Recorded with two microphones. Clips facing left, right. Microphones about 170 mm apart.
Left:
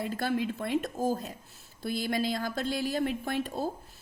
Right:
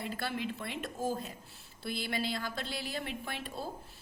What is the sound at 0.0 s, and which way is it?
A woman's voice, 45° left (ahead or behind).